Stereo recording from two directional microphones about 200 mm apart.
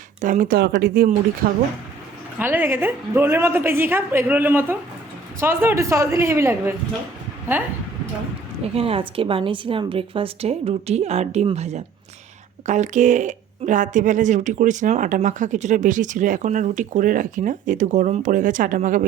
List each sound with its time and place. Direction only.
0.2 s speech: 40° right (ahead or behind)
2.4 s a woman's voice: 10° right (ahead or behind)
8.6 s a woman's voice: 30° right (ahead or behind)